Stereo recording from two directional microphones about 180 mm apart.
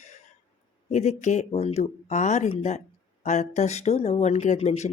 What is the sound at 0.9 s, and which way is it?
Speech, 40° left (ahead or behind).